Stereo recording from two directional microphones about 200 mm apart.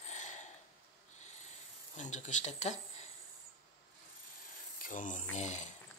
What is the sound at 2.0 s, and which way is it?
Speech, 35° left (ahead or behind).